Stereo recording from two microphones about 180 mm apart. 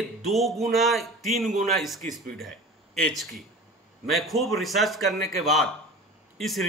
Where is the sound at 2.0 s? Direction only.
45° right (ahead or behind).